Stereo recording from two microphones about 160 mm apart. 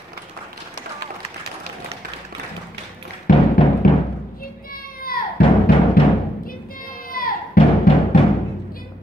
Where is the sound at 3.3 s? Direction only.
60° left (ahead or behind).